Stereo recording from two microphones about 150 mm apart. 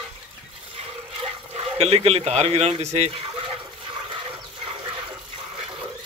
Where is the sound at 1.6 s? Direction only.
40° right (ahead or behind).